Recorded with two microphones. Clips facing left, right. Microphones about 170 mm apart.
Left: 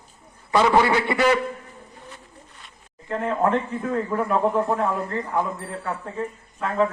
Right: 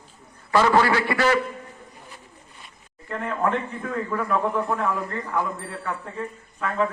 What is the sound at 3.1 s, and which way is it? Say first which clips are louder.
Speech: left 3 dB; 30° left (ahead or behind).